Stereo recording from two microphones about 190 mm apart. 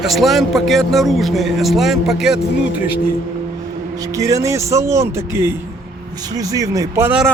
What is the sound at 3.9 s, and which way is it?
Speech, 20° right (ahead or behind).